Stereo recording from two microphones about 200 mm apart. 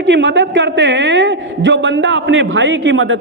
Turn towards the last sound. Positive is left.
turn(degrees=-70)  # may be behind; listen again after turning